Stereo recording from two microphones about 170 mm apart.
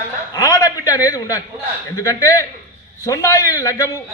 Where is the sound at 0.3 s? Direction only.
20° left (ahead or behind).